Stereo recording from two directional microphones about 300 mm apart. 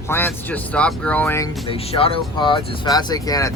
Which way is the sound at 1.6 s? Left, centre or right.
Centre.